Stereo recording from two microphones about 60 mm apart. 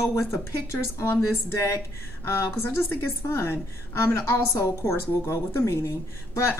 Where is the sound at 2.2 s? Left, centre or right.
Left.